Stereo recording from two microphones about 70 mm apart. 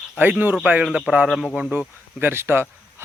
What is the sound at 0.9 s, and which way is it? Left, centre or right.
Speech, centre.